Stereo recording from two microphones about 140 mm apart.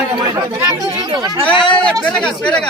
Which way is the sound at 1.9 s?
5° left (ahead or behind).